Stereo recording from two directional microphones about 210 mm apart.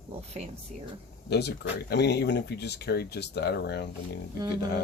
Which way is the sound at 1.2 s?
55° left (ahead or behind).